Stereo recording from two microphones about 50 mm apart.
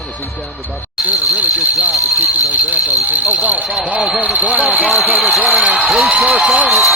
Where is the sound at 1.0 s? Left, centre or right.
Right.